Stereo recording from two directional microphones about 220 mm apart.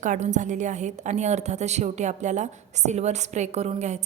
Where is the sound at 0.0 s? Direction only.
35° right (ahead or behind).